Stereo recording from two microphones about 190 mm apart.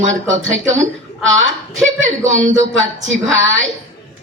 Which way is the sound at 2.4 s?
90° right.